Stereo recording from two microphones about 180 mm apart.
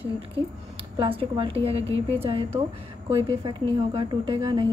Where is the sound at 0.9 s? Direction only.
30° right (ahead or behind).